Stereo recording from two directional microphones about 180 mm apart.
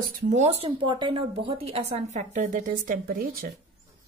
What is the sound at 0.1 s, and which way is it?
Speech, 40° right (ahead or behind).